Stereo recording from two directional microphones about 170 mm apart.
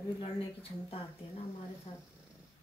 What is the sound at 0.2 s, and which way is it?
Speech, 35° left (ahead or behind).